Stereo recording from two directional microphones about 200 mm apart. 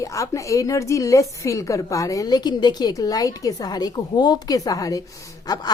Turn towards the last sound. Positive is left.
turn(degrees=20)  # may be behind; listen again after turning